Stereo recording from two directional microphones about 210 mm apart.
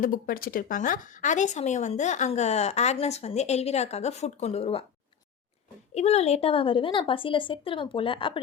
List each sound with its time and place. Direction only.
0.0 s speech: 40° left (ahead or behind)
5.9 s a woman's voice: 30° left (ahead or behind)